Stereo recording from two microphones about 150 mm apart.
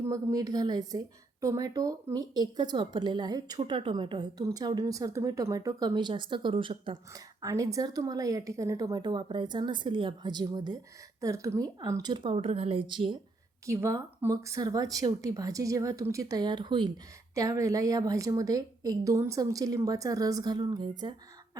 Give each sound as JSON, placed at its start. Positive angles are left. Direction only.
{"t": 0.0, "sound": "a woman's voice", "side_deg": -20}
{"t": 13.7, "sound": "a woman's voice", "side_deg": -20}